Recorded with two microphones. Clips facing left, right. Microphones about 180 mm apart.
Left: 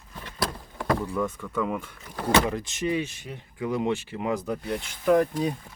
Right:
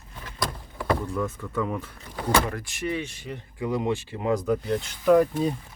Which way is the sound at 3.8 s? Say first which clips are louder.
Even; 20° right (ahead or behind).